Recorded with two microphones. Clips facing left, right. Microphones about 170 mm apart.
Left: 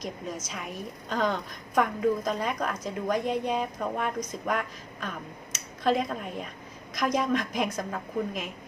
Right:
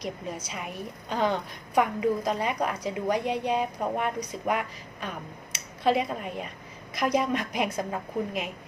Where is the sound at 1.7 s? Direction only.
5° right (ahead or behind).